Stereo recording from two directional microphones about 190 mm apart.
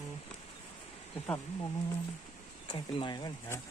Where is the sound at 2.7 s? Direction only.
25° left (ahead or behind).